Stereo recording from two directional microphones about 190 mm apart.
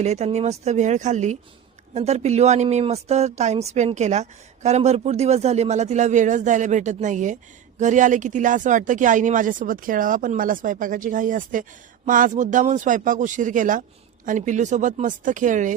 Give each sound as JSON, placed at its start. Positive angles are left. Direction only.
{"t": 0.0, "sound": "speech", "side_deg": -35}